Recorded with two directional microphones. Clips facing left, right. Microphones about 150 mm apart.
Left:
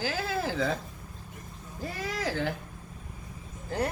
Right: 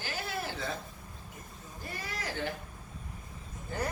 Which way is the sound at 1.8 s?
90° left.